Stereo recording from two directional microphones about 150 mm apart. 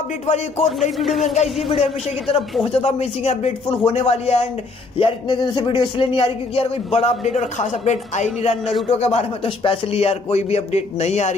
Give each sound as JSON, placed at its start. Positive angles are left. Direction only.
{"t": 0.9, "sound": "speech", "side_deg": 0}
{"t": 1.3, "sound": "speech", "side_deg": 45}
{"t": 4.9, "sound": "speech", "side_deg": 35}